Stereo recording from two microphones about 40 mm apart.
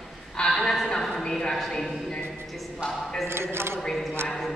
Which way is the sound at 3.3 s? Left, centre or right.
Right.